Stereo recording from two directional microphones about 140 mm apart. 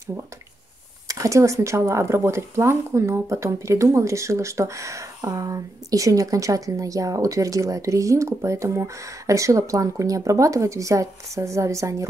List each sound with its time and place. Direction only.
1.0 s speech: 20° right (ahead or behind)